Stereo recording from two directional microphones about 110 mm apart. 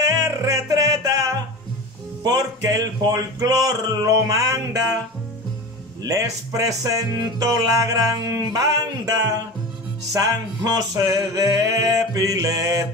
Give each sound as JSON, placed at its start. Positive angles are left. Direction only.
{"t": 0.0, "sound": "music", "side_deg": -35}
{"t": 2.2, "sound": "speech", "side_deg": -35}
{"t": 6.0, "sound": "speech", "side_deg": -30}